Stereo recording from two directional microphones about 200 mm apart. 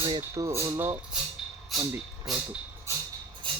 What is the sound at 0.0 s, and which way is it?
Speech, 20° right (ahead or behind).